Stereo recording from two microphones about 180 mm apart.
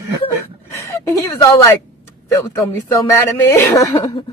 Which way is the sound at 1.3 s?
20° left (ahead or behind).